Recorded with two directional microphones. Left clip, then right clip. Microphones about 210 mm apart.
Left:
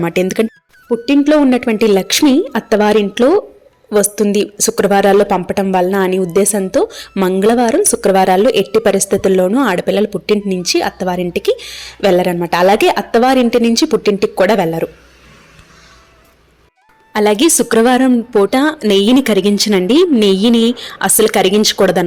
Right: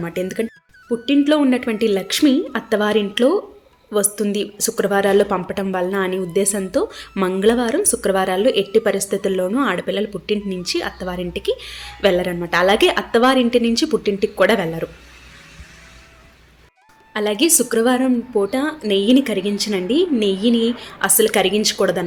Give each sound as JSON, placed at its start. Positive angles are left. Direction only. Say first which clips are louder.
{"t": 0.0, "sound": "a woman's voice", "louder": "left 9 dB", "side_deg": 40}
{"t": 17.1, "sound": "a woman's voice", "louder": "left 7 dB", "side_deg": 40}